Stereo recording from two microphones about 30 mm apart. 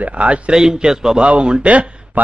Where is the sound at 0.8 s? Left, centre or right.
Centre.